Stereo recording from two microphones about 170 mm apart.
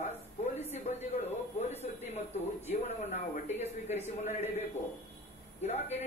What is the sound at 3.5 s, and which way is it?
Speech, 10° right (ahead or behind).